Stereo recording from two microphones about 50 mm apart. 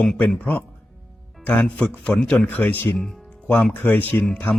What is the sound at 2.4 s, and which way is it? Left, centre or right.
Speech, left.